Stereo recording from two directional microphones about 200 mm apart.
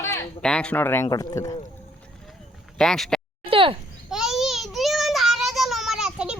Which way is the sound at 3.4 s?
25° right (ahead or behind).